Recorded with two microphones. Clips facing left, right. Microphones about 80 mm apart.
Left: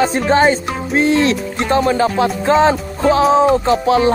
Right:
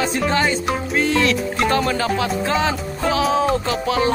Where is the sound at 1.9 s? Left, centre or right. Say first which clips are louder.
Left 5 dB; left.